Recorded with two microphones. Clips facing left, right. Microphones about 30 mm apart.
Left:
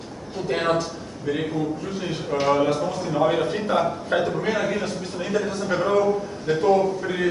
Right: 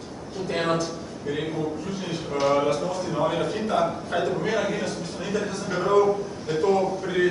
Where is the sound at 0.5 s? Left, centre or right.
Centre.